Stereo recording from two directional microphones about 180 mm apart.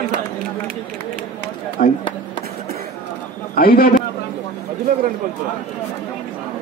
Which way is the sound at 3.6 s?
55° left (ahead or behind).